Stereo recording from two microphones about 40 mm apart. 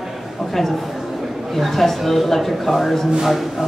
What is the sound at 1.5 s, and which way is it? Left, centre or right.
A man's voice, centre.